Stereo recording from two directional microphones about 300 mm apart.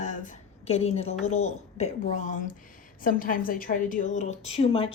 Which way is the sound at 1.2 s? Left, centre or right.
Left.